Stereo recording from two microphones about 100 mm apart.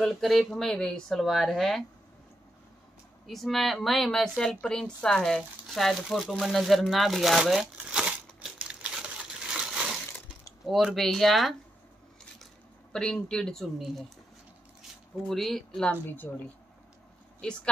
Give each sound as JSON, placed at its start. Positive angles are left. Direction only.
{"t": 0.0, "sound": "speech", "side_deg": 0}
{"t": 3.3, "sound": "speech", "side_deg": 0}
{"t": 6.4, "sound": "crumpling", "side_deg": 0}
{"t": 10.4, "sound": "speech", "side_deg": -5}
{"t": 12.9, "sound": "speech", "side_deg": 5}
{"t": 15.2, "sound": "speech", "side_deg": 5}
{"t": 16.1, "sound": "a woman's voice", "side_deg": 20}